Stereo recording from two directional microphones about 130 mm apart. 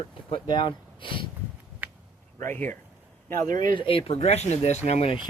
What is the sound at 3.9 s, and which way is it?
Speech, 45° left (ahead or behind).